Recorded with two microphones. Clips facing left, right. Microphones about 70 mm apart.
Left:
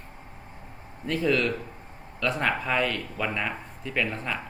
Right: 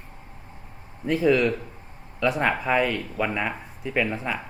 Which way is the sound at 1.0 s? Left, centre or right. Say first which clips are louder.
Right 4 dB; centre.